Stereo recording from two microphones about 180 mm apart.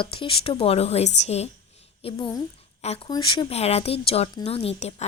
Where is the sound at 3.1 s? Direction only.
25° left (ahead or behind).